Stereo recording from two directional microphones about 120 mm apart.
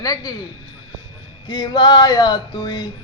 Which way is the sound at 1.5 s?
35° left (ahead or behind).